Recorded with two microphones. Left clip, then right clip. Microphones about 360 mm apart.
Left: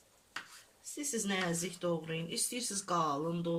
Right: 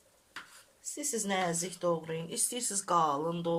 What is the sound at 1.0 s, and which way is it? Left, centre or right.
Speech, centre.